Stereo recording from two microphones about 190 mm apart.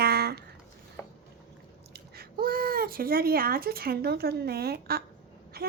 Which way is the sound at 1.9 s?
55° right (ahead or behind).